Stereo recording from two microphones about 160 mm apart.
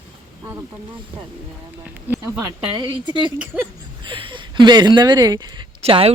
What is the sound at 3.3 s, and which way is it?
Speech, 10° right (ahead or behind).